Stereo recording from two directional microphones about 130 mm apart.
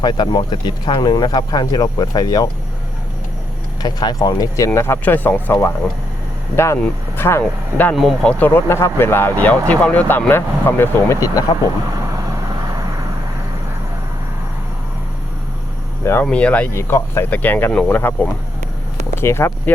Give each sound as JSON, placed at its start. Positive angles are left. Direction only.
{"t": 0.0, "sound": "speech", "side_deg": 35}
{"t": 3.8, "sound": "speech", "side_deg": 30}
{"t": 6.7, "sound": "speech", "side_deg": 20}
{"t": 7.9, "sound": "speech", "side_deg": 5}
{"t": 8.4, "sound": "speech", "side_deg": 20}
{"t": 16.2, "sound": "speech", "side_deg": 10}